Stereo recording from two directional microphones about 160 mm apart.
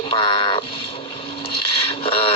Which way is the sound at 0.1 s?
35° left (ahead or behind).